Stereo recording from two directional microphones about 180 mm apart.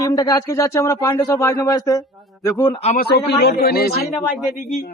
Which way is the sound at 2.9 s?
65° left (ahead or behind).